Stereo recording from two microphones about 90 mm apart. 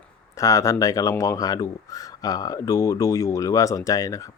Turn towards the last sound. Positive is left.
turn(degrees=40)  # may be behind; listen again after turning